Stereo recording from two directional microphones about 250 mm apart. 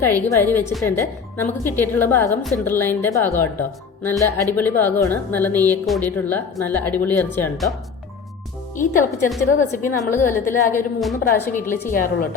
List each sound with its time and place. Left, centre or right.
0.0 s a woman's voice: centre
8.7 s speech: left
10.2 s a woman's voice: centre
11.9 s speech: left